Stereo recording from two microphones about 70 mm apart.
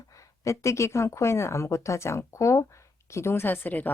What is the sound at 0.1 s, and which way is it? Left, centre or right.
Speech, left.